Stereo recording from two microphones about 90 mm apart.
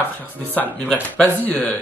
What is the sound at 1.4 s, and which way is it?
Speech, 20° left (ahead or behind).